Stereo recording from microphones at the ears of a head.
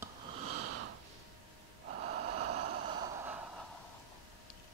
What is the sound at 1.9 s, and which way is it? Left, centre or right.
Gasp, right.